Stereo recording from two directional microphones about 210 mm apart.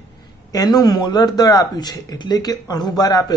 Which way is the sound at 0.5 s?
20° left (ahead or behind).